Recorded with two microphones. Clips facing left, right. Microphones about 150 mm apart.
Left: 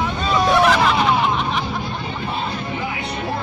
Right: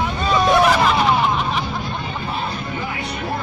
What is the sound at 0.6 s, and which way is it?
Hubbub, centre (ahead or behind).